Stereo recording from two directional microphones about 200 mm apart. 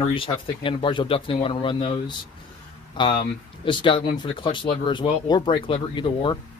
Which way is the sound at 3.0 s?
25° left (ahead or behind).